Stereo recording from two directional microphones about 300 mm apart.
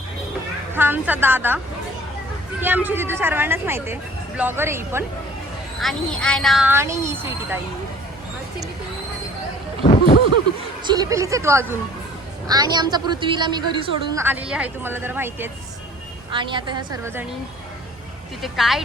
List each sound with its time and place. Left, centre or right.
0.7 s a woman's voice: centre
5.8 s speech: centre
9.8 s a sound: left
10.8 s a woman's voice: centre
18.4 s speech: centre